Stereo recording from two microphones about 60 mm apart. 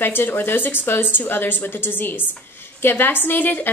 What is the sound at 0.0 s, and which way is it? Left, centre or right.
A woman's voice, left.